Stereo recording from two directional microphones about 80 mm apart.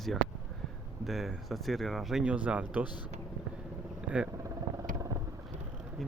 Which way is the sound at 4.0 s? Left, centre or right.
Centre.